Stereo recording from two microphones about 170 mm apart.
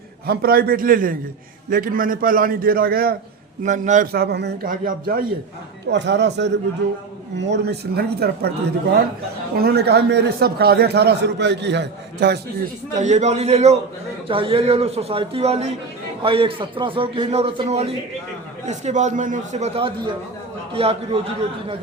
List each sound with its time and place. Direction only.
0.3 s a man's voice: 60° right (ahead or behind)
3.6 s a man's voice: 45° right (ahead or behind); by 4.5 s 80° right
4.6 s a man's voice: 55° right (ahead or behind)
5.9 s a man's voice: 90° right; by 8.5 s 70° right (ahead or behind)
9.6 s a man's voice: 70° right (ahead or behind)
13.0 s a man's voice: 45° right (ahead or behind)